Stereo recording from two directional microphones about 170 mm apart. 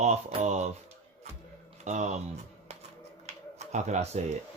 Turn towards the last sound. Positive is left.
turn(degrees=-40)  # may be behind; listen again after turning